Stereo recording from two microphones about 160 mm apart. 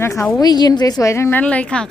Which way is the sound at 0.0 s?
15° left (ahead or behind).